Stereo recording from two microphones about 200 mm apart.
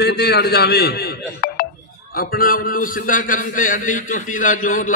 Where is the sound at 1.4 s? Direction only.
50° left (ahead or behind).